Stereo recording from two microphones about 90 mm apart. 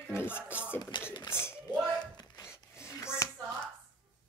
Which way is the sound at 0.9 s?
60° left (ahead or behind).